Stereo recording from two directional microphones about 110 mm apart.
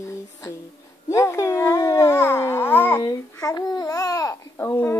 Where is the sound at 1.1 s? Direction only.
25° left (ahead or behind).